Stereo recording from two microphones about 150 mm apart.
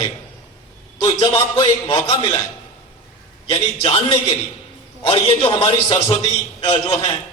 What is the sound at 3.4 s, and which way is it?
A man's voice, 35° left (ahead or behind).